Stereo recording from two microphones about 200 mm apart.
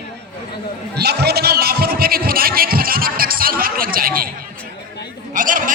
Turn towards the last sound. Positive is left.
turn(degrees=-40)  # may be behind; listen again after turning